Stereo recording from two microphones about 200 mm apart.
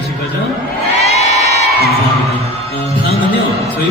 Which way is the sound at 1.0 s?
35° left (ahead or behind).